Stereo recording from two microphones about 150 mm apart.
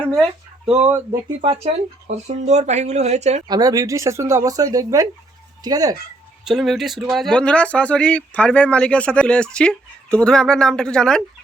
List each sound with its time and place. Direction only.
0.0 s a sound: centre (ahead or behind)
0.8 s speech: 15° right (ahead or behind)
1.4 s speech: 40° right (ahead or behind)
3.5 s speech: 25° right (ahead or behind)
6.4 s speech: centre (ahead or behind)